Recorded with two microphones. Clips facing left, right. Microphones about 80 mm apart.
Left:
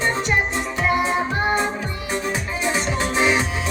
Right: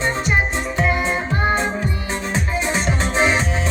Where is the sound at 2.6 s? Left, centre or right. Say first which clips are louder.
Right 1 dB; right.